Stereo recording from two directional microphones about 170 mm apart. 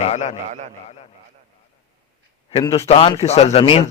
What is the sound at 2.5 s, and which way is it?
A man's voice, 30° left (ahead or behind).